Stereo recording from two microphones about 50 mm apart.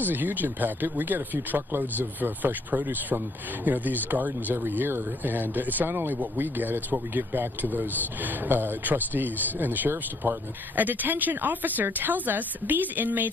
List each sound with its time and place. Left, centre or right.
0.0 s speech: right